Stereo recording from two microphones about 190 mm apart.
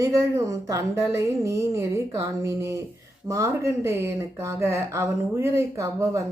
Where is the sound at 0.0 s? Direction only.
15° right (ahead or behind).